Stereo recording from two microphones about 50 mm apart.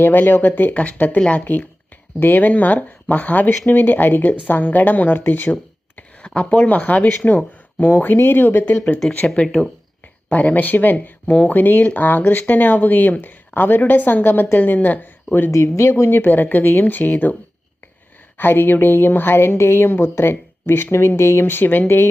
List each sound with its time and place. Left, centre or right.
0.0 s a woman's voice: left
0.7 s a woman's voice: left
6.2 s speech: left
7.9 s speech: left
9.2 s speech: centre
10.2 s a woman's voice: left
11.3 s speech: left
11.5 s a woman's voice: left
15.5 s speech: left
15.9 s a woman's voice: left
18.3 s speech: left
21.6 s a woman's voice: left
21.8 s speech: left